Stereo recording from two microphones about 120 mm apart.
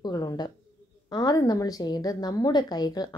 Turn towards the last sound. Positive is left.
turn(degrees=35)  # may be behind; listen again after turning